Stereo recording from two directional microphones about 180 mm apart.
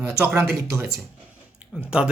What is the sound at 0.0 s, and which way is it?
Speech, 15° right (ahead or behind).